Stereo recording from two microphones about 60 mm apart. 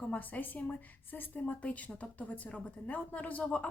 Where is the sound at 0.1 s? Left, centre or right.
Left.